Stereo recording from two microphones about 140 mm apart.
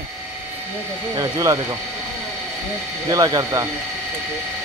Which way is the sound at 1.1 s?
25° right (ahead or behind).